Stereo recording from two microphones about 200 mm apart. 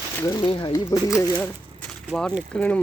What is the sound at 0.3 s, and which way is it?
Speech, 25° left (ahead or behind).